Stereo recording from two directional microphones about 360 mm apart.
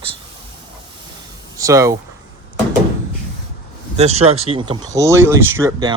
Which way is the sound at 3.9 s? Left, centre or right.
Centre.